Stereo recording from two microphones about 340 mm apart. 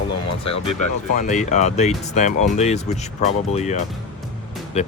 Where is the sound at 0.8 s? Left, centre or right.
Left.